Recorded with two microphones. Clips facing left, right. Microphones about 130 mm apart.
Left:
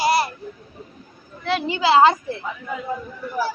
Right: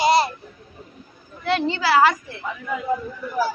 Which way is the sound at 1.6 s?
20° left (ahead or behind).